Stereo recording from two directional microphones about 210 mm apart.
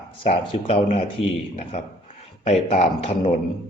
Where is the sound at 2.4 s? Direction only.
30° left (ahead or behind).